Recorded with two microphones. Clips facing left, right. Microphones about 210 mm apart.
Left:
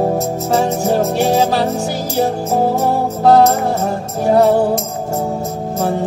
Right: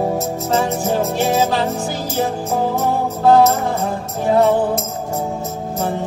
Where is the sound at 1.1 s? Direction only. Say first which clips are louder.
Left 3 dB; 15° left (ahead or behind).